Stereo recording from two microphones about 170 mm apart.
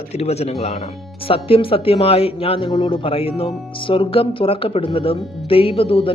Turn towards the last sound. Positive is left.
turn(degrees=35)  # may be behind; listen again after turning